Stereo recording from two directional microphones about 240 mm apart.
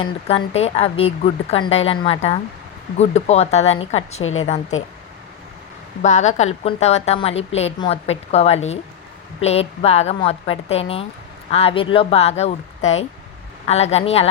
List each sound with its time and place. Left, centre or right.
0.0 s a woman's voice: left
4.2 s a woman's voice: left
4.4 s a woman's voice: left
6.0 s a woman's voice: left